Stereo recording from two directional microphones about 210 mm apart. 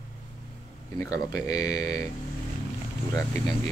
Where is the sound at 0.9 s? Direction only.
15° left (ahead or behind).